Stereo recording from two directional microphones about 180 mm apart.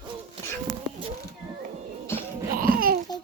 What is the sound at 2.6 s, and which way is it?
Babbling, 55° right (ahead or behind).